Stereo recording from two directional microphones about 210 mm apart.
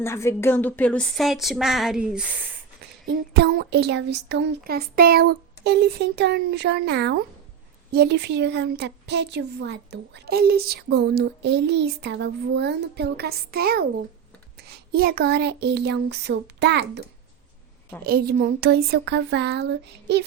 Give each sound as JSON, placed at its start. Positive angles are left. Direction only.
{"t": 0.0, "sound": "speech", "side_deg": 10}
{"t": 3.3, "sound": "a woman's voice", "side_deg": -50}
{"t": 14.9, "sound": "a woman's voice", "side_deg": -45}
{"t": 18.0, "sound": "a woman's voice", "side_deg": -45}